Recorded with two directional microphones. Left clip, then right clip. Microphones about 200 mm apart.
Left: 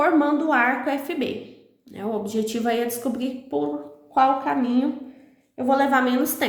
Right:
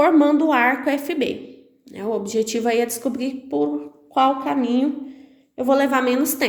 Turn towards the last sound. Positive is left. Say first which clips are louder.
# right 1 dB
turn(degrees=-30)  # may be behind; listen again after turning